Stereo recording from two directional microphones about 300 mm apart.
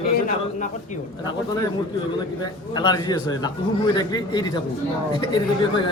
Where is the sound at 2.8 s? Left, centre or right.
Centre.